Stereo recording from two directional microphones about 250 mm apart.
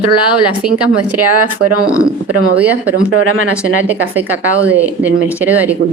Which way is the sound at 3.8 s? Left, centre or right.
Centre.